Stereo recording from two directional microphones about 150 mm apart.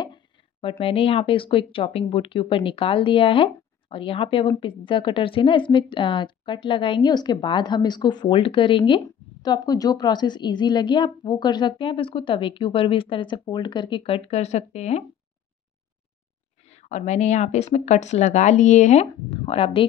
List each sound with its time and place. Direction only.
0.0 s a woman's voice: 35° left (ahead or behind)
16.6 s speech: 50° left (ahead or behind)